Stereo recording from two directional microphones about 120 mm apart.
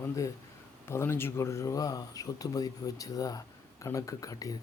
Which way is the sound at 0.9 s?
20° left (ahead or behind).